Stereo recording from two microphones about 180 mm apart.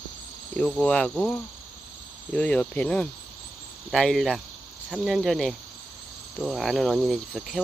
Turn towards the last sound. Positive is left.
turn(degrees=0)  # may be behind; listen again after turning